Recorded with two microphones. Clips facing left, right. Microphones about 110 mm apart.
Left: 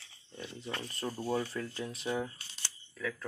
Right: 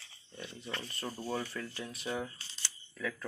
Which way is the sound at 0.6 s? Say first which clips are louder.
Left 3 dB; 15° left (ahead or behind).